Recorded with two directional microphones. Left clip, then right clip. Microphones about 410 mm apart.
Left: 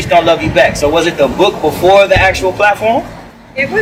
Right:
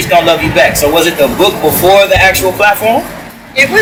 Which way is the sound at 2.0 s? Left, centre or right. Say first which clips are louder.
Right 1 dB; centre.